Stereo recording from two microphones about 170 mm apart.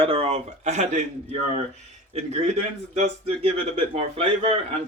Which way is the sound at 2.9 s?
35° right (ahead or behind).